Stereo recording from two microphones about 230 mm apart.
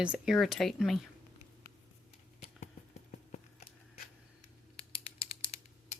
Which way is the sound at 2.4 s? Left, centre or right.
Left.